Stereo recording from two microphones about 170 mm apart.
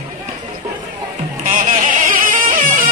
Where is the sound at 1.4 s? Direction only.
45° right (ahead or behind).